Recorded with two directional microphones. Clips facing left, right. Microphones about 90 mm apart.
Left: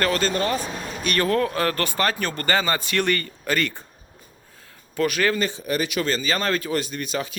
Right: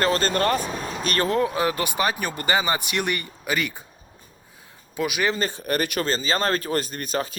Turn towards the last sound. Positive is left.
turn(degrees=-40)  # may be behind; listen again after turning